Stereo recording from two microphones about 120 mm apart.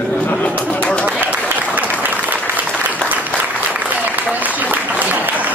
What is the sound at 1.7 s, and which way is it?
Applause, 15° right (ahead or behind).